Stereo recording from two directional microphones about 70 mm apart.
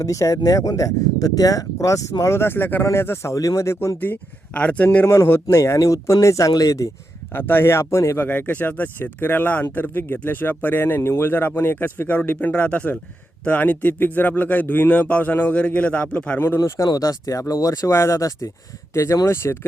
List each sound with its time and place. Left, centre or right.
0.0 s speech: left
2.2 s speech: left
3.9 s speech: left
4.9 s speech: left
7.3 s speech: left
8.2 s speech: left
16.6 s speech: left
18.9 s speech: left